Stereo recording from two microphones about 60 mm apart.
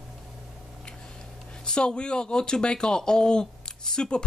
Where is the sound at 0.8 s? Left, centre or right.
Centre.